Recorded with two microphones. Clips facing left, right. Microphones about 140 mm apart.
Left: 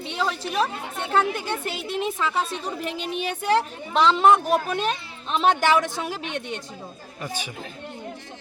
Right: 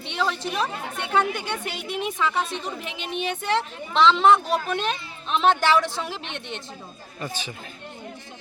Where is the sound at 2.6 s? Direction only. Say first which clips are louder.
Left 4 dB; 40° left (ahead or behind).